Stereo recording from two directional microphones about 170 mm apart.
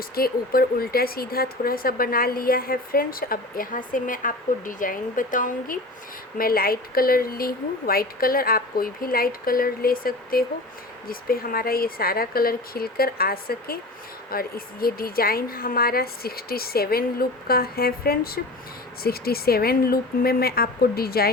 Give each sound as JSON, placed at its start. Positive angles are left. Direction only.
{"t": 0.2, "sound": "speech", "side_deg": 60}